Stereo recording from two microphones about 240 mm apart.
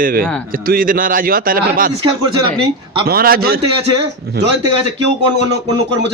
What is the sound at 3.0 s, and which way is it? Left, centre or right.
Speech, right.